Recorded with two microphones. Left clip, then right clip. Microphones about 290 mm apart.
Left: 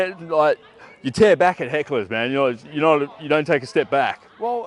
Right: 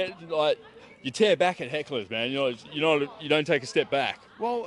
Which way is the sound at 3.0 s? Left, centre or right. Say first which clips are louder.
Left 5 dB; centre.